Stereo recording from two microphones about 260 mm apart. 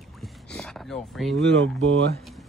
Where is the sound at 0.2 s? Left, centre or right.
Centre.